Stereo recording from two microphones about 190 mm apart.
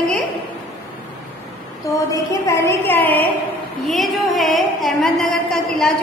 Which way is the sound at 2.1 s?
15° left (ahead or behind).